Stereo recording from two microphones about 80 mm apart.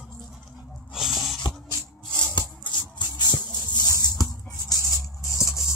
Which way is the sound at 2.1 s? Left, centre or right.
Left.